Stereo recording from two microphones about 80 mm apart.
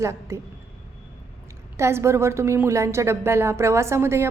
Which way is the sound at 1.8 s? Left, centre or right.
Right.